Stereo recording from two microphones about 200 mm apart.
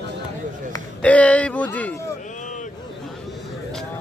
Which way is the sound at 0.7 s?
5° left (ahead or behind).